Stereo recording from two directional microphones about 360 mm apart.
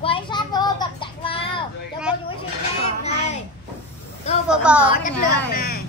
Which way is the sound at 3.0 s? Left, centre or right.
Centre.